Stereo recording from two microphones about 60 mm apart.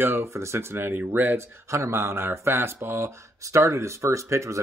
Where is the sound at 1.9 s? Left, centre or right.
Right.